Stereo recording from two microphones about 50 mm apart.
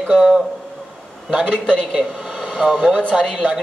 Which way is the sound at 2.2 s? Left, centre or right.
Centre.